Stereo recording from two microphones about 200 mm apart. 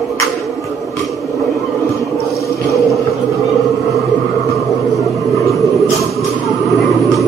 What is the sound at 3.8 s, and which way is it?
Music, 15° right (ahead or behind).